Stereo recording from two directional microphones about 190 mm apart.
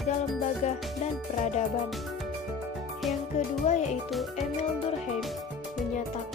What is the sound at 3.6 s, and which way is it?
Speech, 35° left (ahead or behind).